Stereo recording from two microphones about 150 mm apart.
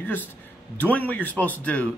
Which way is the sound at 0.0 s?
10° left (ahead or behind).